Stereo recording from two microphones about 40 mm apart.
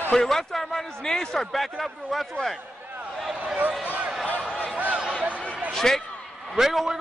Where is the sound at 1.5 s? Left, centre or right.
Centre.